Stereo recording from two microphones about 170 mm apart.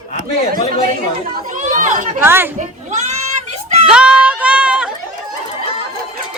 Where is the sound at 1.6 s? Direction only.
50° right (ahead or behind).